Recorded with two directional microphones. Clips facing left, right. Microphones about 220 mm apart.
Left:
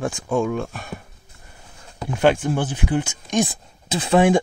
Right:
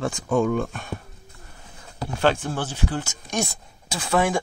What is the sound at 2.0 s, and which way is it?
Speech, 15° left (ahead or behind).